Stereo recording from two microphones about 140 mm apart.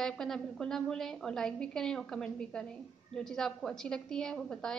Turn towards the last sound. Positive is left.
turn(degrees=5)  # may be behind; listen again after turning